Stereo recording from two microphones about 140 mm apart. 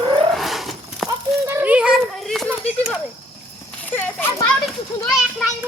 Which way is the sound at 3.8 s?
10° left (ahead or behind).